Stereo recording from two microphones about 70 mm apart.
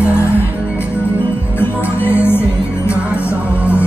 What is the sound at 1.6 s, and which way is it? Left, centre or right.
Music, left.